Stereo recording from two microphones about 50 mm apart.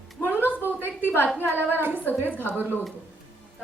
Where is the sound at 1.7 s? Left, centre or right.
Right.